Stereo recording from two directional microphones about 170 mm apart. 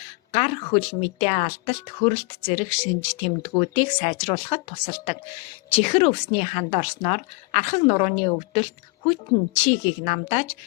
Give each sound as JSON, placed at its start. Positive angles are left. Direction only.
{"t": 0.3, "sound": "speech", "side_deg": 35}